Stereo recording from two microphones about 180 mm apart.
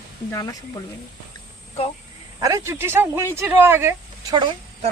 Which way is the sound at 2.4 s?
20° right (ahead or behind).